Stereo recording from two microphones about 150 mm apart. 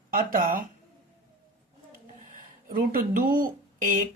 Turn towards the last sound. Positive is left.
turn(degrees=-65)  # may be behind; listen again after turning